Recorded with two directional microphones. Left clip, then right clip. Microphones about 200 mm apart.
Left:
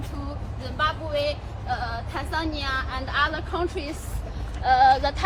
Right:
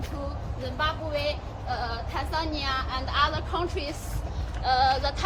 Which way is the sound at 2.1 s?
45° left (ahead or behind).